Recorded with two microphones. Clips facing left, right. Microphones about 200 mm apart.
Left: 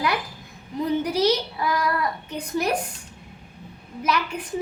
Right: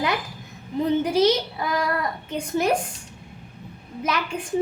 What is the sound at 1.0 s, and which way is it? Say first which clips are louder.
A woman's voice: right 2 dB; 25° right (ahead or behind).